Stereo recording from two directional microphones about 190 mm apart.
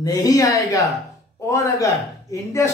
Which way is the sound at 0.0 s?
15° left (ahead or behind).